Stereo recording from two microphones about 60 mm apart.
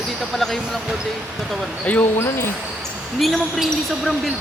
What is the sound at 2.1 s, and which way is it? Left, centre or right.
Speech, left.